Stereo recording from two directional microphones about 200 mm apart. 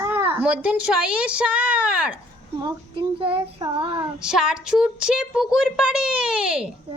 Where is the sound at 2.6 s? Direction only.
20° right (ahead or behind).